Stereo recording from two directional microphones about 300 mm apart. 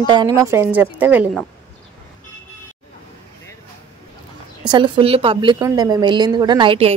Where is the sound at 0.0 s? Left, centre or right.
Centre.